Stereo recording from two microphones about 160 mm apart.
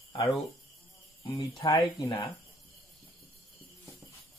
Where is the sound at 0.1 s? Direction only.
25° left (ahead or behind).